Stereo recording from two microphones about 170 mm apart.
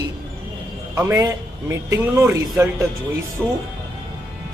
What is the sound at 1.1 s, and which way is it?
A man's voice, 20° right (ahead or behind).